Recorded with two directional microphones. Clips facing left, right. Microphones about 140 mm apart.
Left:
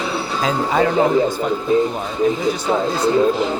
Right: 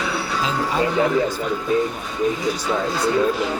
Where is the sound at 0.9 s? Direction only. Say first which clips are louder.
Left 3 dB; 30° left (ahead or behind).